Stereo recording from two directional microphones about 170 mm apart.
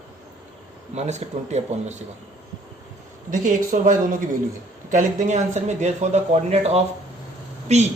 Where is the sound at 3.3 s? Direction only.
50° right (ahead or behind).